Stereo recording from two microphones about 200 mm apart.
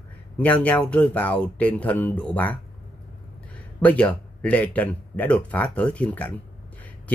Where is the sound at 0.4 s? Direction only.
10° left (ahead or behind).